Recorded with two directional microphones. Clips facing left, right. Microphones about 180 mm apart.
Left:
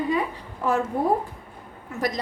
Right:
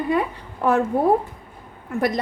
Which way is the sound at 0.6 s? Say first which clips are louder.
Right 4 dB; 60° right (ahead or behind).